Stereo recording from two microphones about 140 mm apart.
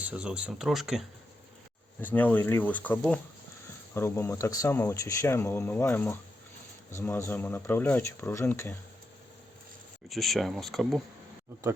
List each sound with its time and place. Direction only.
0.0 s speech: 10° right (ahead or behind)
2.0 s speech: 10° left (ahead or behind)
10.1 s speech: centre (ahead or behind)